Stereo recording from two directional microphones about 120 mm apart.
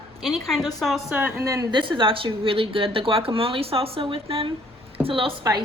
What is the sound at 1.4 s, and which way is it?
Speech, 25° right (ahead or behind).